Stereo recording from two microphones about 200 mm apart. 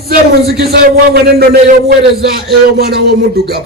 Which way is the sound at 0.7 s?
50° right (ahead or behind).